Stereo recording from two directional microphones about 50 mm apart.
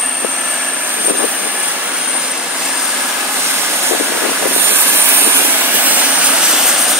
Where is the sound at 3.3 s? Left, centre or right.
Right.